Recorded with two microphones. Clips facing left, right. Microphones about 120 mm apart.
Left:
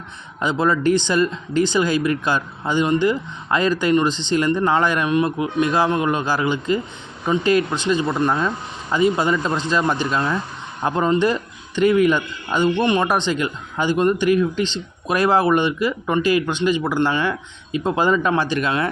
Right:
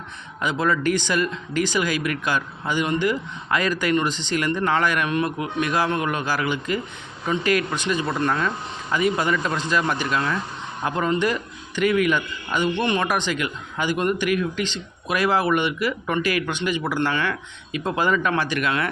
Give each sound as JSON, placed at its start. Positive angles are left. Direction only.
{"t": 0.4, "sound": "a man's voice", "side_deg": 30}
{"t": 12.7, "sound": "a man's voice", "side_deg": 20}